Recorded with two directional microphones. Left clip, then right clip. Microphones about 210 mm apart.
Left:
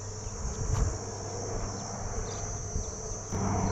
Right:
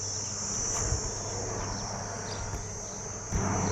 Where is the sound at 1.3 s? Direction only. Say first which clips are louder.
Right 2 dB; 40° left (ahead or behind).